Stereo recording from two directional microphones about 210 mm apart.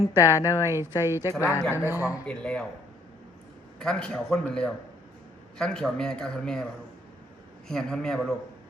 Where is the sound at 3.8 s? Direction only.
5° left (ahead or behind).